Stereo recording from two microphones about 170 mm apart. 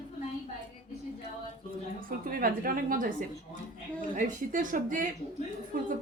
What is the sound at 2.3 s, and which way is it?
A woman's voice, 55° right (ahead or behind).